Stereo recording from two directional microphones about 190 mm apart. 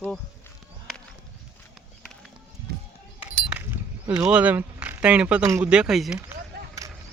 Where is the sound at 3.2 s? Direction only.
10° right (ahead or behind).